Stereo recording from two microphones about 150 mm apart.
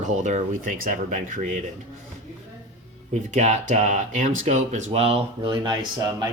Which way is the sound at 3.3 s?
55° right (ahead or behind).